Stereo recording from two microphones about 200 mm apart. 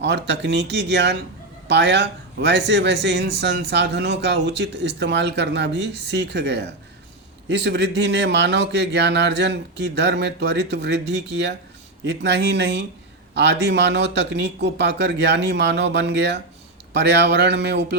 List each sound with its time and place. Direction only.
0.0 s a man's voice: 60° right (ahead or behind)